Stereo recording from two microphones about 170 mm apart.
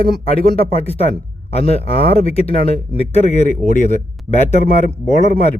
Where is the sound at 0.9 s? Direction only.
35° left (ahead or behind).